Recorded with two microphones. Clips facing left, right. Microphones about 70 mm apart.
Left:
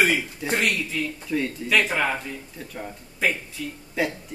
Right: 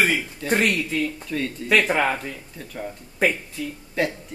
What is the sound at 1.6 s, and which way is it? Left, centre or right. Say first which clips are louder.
Speech: right 4 dB; right.